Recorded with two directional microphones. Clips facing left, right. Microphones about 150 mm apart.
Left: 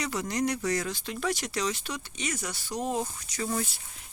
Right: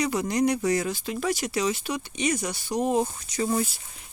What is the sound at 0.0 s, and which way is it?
Speech, 15° right (ahead or behind).